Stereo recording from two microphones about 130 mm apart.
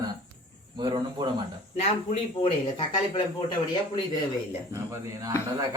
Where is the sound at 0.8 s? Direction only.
35° right (ahead or behind).